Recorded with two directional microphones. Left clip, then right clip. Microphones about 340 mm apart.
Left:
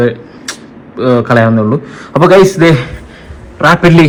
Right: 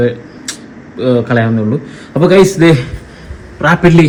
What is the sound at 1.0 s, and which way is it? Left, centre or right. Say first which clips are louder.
Speech: left 4 dB; left.